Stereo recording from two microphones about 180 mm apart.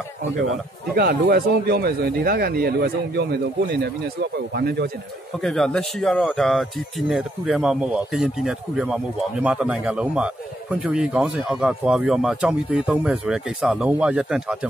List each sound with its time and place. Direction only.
0.9 s speech: 60° right (ahead or behind)
5.4 s a man's voice: 5° left (ahead or behind)